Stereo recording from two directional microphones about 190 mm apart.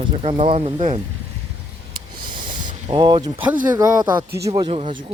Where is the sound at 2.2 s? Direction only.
25° right (ahead or behind).